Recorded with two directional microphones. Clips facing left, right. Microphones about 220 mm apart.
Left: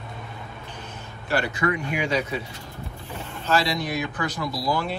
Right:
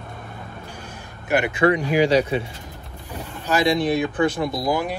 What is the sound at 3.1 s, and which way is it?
Speech, 15° right (ahead or behind).